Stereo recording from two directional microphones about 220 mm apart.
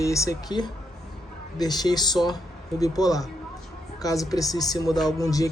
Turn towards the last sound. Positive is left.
turn(degrees=15)  # may be behind; listen again after turning